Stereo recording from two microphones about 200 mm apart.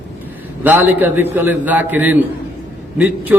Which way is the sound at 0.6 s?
10° right (ahead or behind).